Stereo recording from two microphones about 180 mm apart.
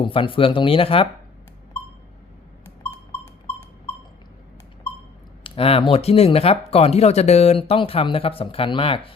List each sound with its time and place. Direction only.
0.0 s speech: 30° left (ahead or behind)
5.4 s a sound: 30° left (ahead or behind)
5.9 s speech: 35° left (ahead or behind)